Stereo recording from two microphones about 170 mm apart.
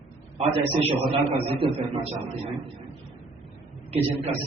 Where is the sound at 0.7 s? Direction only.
35° right (ahead or behind).